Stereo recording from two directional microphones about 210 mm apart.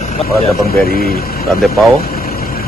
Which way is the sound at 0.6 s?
45° left (ahead or behind).